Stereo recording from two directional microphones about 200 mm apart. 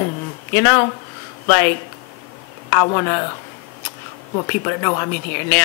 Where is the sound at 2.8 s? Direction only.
20° left (ahead or behind).